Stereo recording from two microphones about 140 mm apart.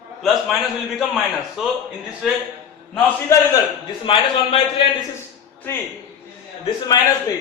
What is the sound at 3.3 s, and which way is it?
Speech, 20° left (ahead or behind).